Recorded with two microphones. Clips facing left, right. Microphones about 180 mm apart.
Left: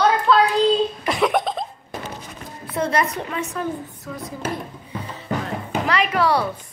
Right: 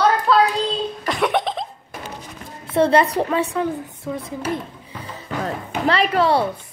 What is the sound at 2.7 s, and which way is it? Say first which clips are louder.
A woman's voice: right 6 dB; 30° right (ahead or behind).